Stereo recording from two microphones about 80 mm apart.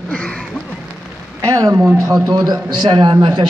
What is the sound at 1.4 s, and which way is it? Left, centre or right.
A man's voice, right.